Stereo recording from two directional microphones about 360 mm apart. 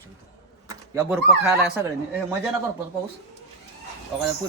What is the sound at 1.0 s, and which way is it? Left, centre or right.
Speech, centre.